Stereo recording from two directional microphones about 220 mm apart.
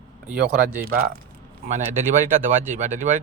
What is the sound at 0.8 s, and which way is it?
A man's voice, 40° right (ahead or behind).